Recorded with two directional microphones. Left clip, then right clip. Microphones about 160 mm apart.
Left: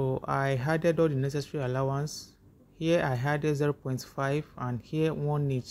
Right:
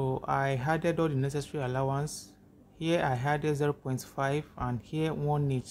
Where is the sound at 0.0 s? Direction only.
15° left (ahead or behind).